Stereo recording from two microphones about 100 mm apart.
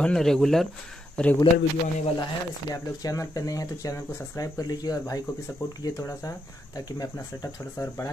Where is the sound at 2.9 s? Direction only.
35° left (ahead or behind).